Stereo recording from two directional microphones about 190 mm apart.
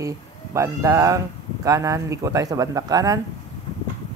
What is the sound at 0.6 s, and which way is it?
Speech, 15° right (ahead or behind).